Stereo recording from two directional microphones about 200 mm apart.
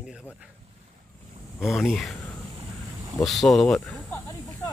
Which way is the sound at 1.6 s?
Centre (ahead or behind).